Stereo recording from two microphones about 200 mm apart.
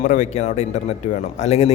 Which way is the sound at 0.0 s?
40° left (ahead or behind).